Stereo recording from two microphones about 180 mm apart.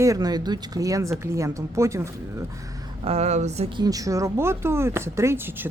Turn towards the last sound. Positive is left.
turn(degrees=-10)  # may be behind; listen again after turning